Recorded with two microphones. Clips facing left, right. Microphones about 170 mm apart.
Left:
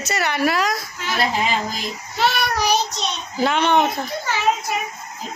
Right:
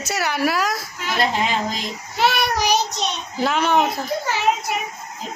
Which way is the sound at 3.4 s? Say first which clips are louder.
Left 1 dB; 5° right (ahead or behind).